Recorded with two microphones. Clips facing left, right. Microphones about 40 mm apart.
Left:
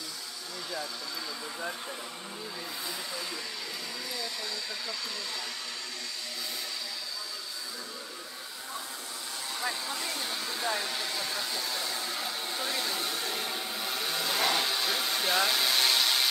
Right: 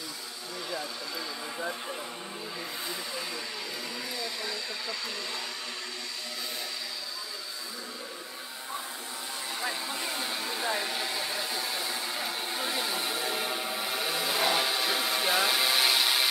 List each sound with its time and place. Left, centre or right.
9.8 s hair dryer: right